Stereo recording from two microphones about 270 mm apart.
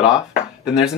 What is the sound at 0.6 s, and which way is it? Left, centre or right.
Speech, centre.